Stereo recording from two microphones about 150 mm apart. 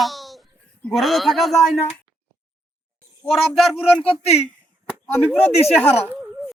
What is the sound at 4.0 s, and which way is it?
Speech, 40° left (ahead or behind).